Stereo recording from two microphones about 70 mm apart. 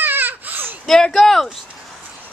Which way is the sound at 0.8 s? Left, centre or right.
Centre.